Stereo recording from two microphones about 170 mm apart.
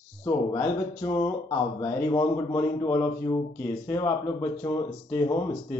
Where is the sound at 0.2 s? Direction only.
20° left (ahead or behind).